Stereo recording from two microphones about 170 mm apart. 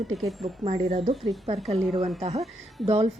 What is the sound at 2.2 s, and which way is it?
Speech, 35° right (ahead or behind).